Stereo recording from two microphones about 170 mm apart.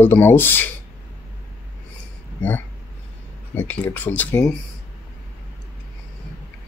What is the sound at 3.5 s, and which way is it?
Speech, 10° left (ahead or behind).